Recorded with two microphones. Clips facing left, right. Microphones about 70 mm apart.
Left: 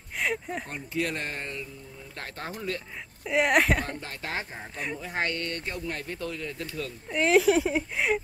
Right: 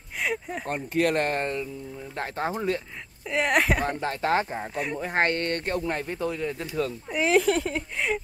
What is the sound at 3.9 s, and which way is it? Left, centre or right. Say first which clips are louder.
Speech: right 10 dB; right.